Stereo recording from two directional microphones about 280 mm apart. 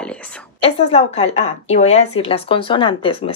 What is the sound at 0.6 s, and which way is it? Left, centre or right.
A woman's voice, left.